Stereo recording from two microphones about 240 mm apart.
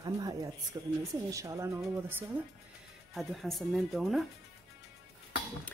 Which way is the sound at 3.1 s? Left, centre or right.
Centre.